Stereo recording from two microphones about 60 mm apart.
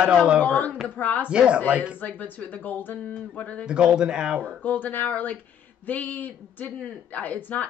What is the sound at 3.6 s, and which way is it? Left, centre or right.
Speech, centre.